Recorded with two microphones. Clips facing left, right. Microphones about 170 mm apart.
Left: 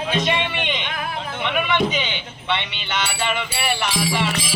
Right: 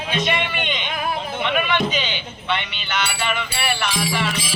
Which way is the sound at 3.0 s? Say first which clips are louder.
Left 1 dB; 25° left (ahead or behind).